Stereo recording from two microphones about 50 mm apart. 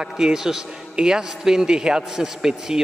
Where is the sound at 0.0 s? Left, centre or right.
Centre.